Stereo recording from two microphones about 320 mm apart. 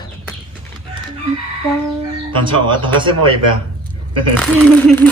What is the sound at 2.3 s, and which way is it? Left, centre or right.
Speech, centre.